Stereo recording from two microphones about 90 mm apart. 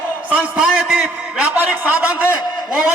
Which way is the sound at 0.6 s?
5° right (ahead or behind).